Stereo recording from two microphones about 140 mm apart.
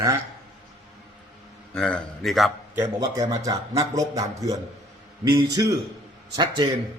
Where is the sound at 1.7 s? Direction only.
5° left (ahead or behind).